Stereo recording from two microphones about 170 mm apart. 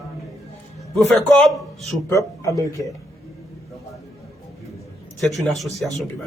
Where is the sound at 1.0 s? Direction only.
5° left (ahead or behind).